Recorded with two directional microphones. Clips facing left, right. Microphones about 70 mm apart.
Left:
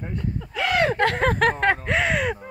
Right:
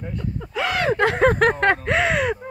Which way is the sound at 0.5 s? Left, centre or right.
Centre.